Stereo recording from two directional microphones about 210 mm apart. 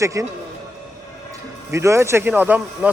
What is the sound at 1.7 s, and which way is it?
Speech, 15° right (ahead or behind).